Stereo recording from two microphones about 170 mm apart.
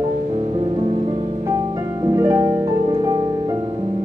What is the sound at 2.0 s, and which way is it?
Harp, 20° right (ahead or behind).